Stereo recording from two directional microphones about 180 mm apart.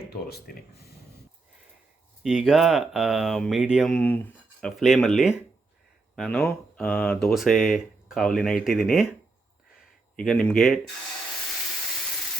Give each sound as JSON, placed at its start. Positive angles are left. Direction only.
{"t": 0.1, "sound": "speech", "side_deg": 60}
{"t": 2.2, "sound": "speech", "side_deg": 0}
{"t": 10.2, "sound": "speech", "side_deg": 5}